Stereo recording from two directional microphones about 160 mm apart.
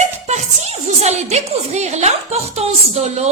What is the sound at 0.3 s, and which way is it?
A woman's voice, 45° right (ahead or behind).